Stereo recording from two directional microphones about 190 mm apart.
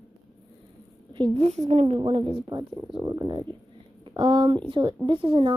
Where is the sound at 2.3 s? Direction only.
20° right (ahead or behind).